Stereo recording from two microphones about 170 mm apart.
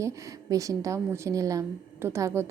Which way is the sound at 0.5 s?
20° right (ahead or behind).